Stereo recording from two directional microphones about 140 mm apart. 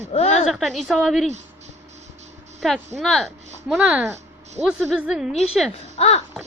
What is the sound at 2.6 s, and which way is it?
A woman's voice, centre (ahead or behind).